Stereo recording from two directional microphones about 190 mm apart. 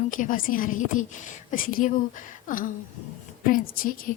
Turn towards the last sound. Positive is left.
turn(degrees=50)  # may be behind; listen again after turning